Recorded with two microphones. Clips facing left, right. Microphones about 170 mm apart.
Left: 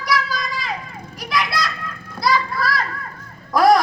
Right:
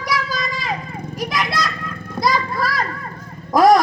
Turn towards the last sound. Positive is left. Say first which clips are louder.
# right 2 dB
turn(degrees=-45)  # may be behind; listen again after turning